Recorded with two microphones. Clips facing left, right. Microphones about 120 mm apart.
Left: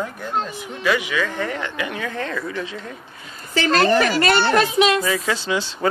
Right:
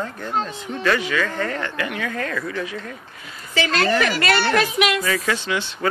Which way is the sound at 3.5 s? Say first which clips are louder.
Left 3 dB; 40° left (ahead or behind).